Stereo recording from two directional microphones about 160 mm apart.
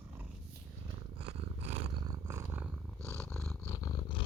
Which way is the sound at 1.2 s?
40° right (ahead or behind).